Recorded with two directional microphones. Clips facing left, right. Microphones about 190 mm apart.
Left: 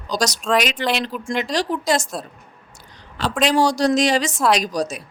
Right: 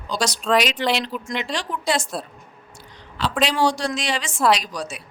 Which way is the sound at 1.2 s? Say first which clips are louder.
Left 5 dB; 30° left (ahead or behind).